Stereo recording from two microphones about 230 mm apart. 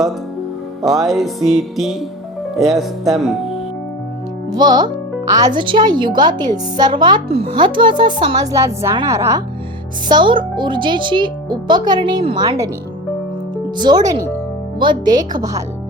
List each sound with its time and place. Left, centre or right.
0.9 s music: centre
4.5 s speech: centre
13.7 s a woman's voice: centre